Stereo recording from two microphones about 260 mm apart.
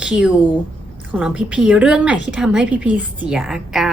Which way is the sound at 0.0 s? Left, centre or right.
Centre.